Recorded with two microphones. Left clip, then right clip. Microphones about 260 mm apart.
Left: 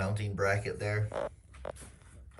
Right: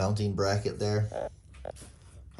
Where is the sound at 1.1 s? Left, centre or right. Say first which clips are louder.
Right 1 dB; left.